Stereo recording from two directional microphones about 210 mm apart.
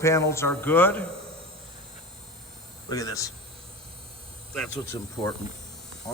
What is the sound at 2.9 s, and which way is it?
Speech, 15° left (ahead or behind).